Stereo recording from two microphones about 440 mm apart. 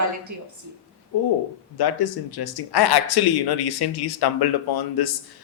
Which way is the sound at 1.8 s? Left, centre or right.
Left.